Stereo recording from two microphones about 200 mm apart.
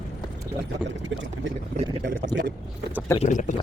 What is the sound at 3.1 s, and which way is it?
Speech, 40° left (ahead or behind).